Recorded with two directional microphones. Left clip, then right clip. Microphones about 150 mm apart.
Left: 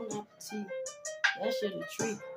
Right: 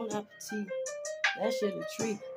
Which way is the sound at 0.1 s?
45° right (ahead or behind).